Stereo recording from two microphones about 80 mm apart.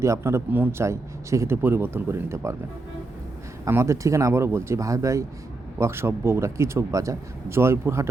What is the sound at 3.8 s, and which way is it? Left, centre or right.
Speech, right.